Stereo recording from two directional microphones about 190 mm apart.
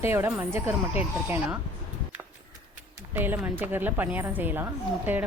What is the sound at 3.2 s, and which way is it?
A woman's voice, 10° right (ahead or behind).